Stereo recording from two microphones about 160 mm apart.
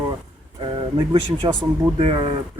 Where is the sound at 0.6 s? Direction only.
30° right (ahead or behind).